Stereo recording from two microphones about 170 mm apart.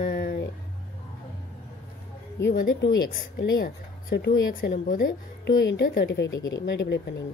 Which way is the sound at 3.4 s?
70° left (ahead or behind).